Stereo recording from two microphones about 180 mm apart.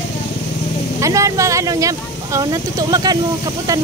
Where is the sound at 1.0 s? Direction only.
15° right (ahead or behind).